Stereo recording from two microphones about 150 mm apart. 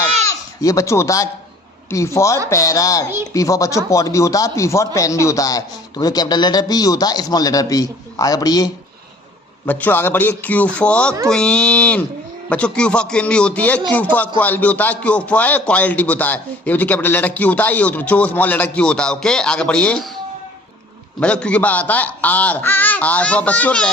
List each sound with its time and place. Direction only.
0.6 s a man's voice: 20° left (ahead or behind)
9.6 s speech: 10° left (ahead or behind)
21.2 s speech: 5° left (ahead or behind)